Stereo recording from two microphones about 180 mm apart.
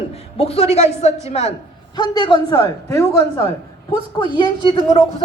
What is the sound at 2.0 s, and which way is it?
Speech, 25° left (ahead or behind).